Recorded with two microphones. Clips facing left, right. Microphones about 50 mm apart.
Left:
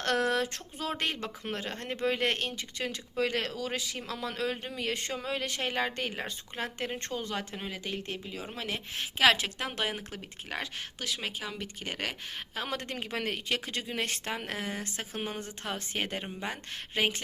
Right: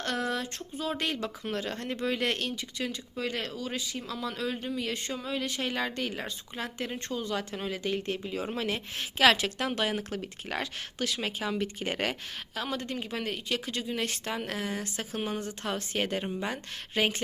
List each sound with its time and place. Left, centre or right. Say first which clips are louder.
0.0 s a sound: left 3 dB; left
0.9 s speech: right 1 dB; left
2.9 s speech: left 3 dB; left
5.7 s speech: even; left
7.5 s speech: right 5 dB; centre
8.2 s speech: right 6 dB; centre
8.5 s speech: right 3 dB; centre
12.6 s speech: right 3 dB; left
14.3 s speech: right 2 dB; left